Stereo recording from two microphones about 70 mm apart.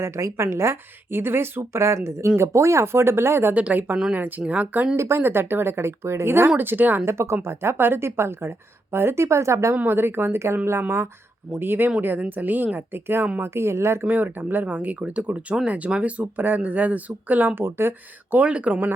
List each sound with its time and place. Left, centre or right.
0.0 s speech: right
3.5 s speech: right
4.9 s speech: right
7.0 s speech: right
9.7 s speech: right